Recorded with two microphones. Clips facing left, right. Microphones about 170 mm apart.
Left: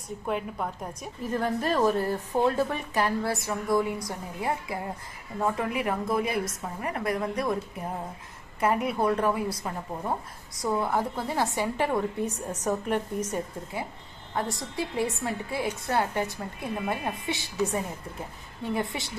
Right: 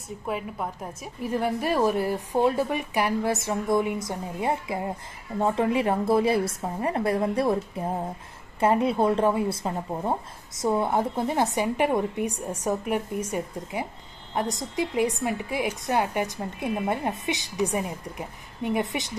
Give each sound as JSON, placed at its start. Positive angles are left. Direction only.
{"t": 0.3, "sound": "a woman's voice", "side_deg": -5}